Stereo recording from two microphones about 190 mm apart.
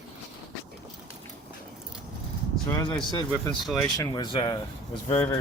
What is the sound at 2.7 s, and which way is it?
Speech, 20° left (ahead or behind).